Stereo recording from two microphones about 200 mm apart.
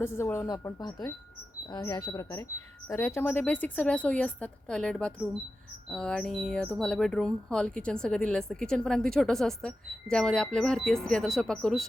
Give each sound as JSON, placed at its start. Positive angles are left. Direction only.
{"t": 0.0, "sound": "speech", "side_deg": 10}